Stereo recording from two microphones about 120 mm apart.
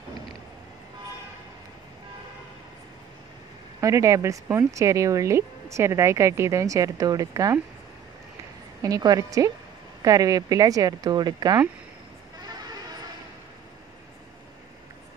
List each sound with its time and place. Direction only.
3.8 s speech: 25° right (ahead or behind)
8.8 s speech: 30° right (ahead or behind)